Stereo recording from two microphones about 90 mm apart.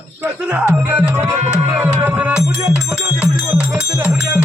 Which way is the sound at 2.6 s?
35° right (ahead or behind).